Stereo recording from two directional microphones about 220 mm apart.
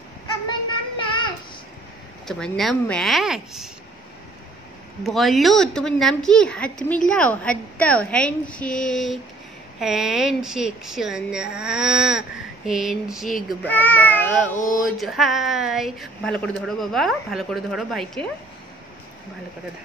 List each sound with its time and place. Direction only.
0.9 s child singing: 20° left (ahead or behind)
2.2 s speech: centre (ahead or behind)
5.0 s speech: centre (ahead or behind)